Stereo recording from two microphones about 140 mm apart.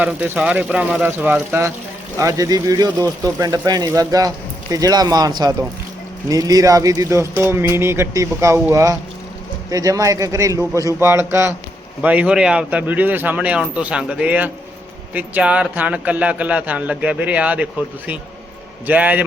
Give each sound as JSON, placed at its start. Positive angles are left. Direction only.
{"t": 0.0, "sound": "a man's voice", "side_deg": -10}